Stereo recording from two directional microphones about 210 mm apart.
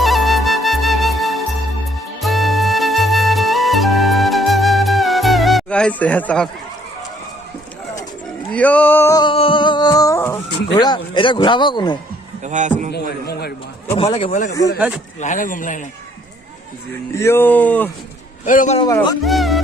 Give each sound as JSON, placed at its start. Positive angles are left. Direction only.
{"t": 0.0, "sound": "music", "side_deg": 0}
{"t": 8.5, "sound": "music", "side_deg": 5}
{"t": 10.8, "sound": "speech", "side_deg": 20}
{"t": 12.5, "sound": "a man's voice", "side_deg": -35}
{"t": 12.9, "sound": "a man's voice", "side_deg": 50}
{"t": 13.9, "sound": "speech", "side_deg": 25}
{"t": 14.8, "sound": "speech", "side_deg": -5}
{"t": 15.2, "sound": "speech", "side_deg": 40}
{"t": 17.2, "sound": "speech", "side_deg": 10}
{"t": 18.4, "sound": "speech", "side_deg": 35}
{"t": 18.8, "sound": "speech", "side_deg": 20}
{"t": 19.2, "sound": "music", "side_deg": 0}